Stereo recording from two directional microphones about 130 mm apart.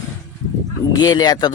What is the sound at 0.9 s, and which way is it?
Speech, 30° left (ahead or behind).